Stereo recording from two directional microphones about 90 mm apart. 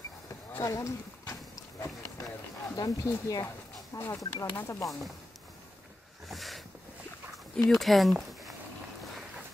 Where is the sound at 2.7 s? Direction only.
40° left (ahead or behind).